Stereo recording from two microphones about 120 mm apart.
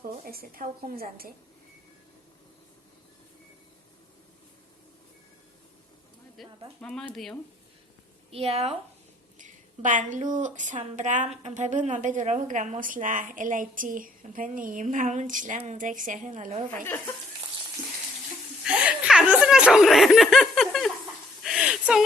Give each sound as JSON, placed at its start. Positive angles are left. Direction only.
{"t": 0.6, "sound": "a woman's voice", "side_deg": -90}
{"t": 6.4, "sound": "a sound", "side_deg": 0}
{"t": 6.8, "sound": "speech", "side_deg": 5}
{"t": 8.3, "sound": "speech", "side_deg": -55}
{"t": 9.4, "sound": "a woman's voice", "side_deg": -90}
{"t": 18.6, "sound": "snicker", "side_deg": -5}
{"t": 21.4, "sound": "a sound", "side_deg": -5}